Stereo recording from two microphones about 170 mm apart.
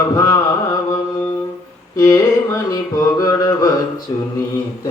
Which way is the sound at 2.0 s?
20° left (ahead or behind).